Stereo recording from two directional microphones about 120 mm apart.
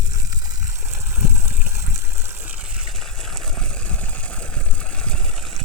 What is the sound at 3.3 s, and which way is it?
Vehicle, 5° left (ahead or behind).